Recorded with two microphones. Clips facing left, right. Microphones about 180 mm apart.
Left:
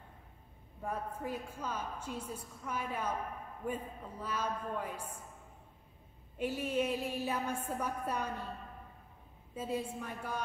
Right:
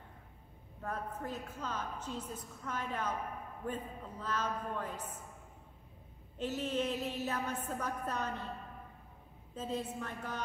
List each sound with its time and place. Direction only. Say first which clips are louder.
0.8 s a woman's voice: left 1 dB; 10° left (ahead or behind)
6.3 s a woman's voice: left 2 dB; 10° left (ahead or behind)
9.6 s a woman's voice: left 1 dB; 10° left (ahead or behind)